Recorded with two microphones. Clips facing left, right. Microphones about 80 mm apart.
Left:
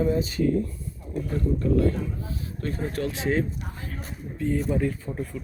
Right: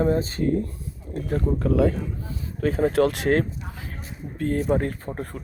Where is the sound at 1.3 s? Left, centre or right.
Right.